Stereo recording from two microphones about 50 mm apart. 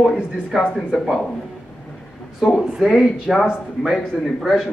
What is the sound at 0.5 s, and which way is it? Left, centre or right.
Speech, centre.